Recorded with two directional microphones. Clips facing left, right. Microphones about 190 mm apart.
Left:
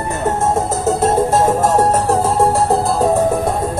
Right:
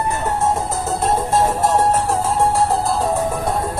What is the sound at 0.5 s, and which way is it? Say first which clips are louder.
Music: left 6 dB; 45° left (ahead or behind).